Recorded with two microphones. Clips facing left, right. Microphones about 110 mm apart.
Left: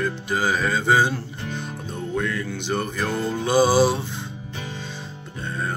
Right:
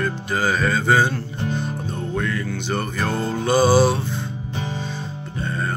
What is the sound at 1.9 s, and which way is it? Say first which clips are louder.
Music: left 1 dB; 5° left (ahead or behind).